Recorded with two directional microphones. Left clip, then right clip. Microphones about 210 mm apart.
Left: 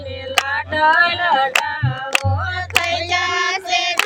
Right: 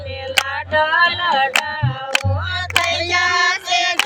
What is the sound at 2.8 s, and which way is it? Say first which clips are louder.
Child singing: right 1 dB; 40° right (ahead or behind).